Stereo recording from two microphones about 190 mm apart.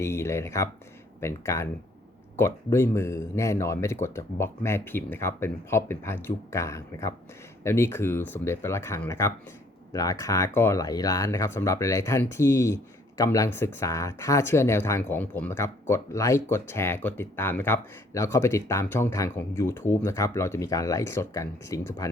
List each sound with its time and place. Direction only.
0.0 s speech: 15° left (ahead or behind)